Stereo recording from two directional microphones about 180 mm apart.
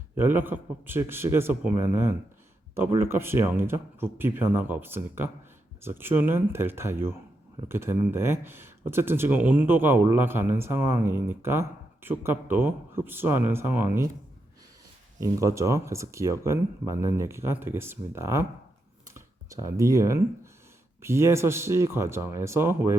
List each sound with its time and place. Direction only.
0.2 s speech: 10° right (ahead or behind)
15.2 s speech: 15° right (ahead or behind)
19.5 s speech: 20° right (ahead or behind)